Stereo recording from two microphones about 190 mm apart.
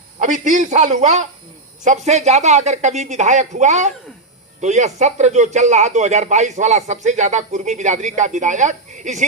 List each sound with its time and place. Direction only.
0.2 s speech: 40° right (ahead or behind)